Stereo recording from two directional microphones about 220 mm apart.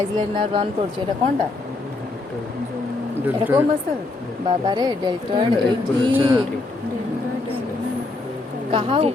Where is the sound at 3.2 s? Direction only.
10° right (ahead or behind).